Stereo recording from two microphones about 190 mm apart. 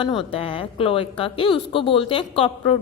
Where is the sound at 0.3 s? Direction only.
30° left (ahead or behind).